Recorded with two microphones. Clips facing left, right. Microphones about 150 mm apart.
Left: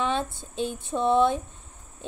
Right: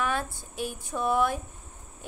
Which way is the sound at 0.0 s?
25° left (ahead or behind).